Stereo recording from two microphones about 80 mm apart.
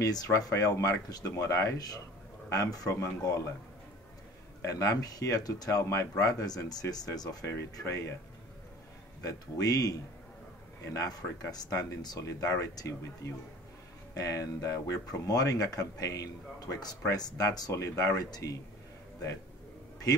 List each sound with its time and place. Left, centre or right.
0.0 s speech: left
4.6 s speech: left
9.2 s speech: left